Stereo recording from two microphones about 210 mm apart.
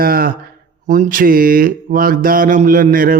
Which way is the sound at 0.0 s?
45° right (ahead or behind).